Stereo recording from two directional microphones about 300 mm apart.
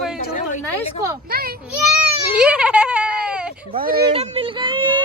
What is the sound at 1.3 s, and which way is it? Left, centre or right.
Children playing, right.